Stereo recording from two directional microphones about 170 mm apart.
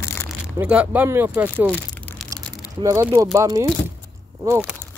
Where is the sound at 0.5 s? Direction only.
10° right (ahead or behind).